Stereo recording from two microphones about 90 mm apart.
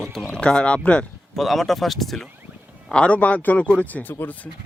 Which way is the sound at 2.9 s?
15° left (ahead or behind).